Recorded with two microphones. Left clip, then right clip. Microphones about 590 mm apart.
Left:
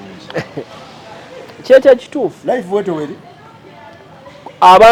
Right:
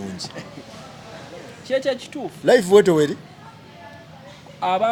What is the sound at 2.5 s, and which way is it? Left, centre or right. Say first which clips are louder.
Speech: right 3 dB; right.